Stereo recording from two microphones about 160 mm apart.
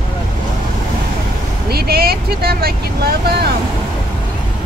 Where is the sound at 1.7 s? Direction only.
75° right (ahead or behind).